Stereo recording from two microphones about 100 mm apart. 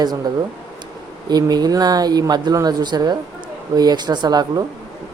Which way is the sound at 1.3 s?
40° right (ahead or behind).